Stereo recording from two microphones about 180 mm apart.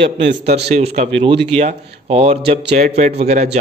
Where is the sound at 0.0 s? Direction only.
75° right (ahead or behind).